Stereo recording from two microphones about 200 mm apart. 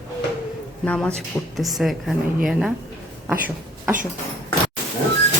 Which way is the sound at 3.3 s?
10° right (ahead or behind).